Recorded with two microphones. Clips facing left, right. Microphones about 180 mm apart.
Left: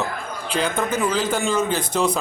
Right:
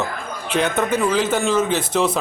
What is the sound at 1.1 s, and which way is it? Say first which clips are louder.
Speech: right 3 dB; 5° right (ahead or behind).